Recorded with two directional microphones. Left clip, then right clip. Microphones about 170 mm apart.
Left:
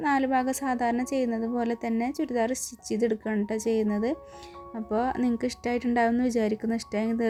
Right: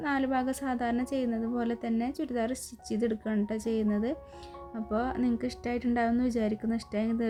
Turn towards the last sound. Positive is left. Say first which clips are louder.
# left 3 dB
turn(degrees=20)  # may be behind; listen again after turning